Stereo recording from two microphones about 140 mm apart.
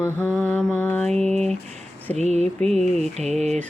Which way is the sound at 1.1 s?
50° right (ahead or behind).